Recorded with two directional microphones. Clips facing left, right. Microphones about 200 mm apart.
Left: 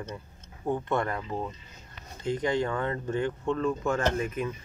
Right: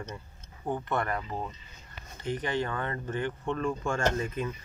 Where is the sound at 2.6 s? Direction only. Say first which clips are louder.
Left 4 dB; 15° left (ahead or behind).